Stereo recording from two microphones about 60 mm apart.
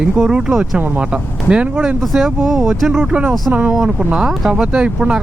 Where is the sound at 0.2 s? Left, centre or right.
Centre.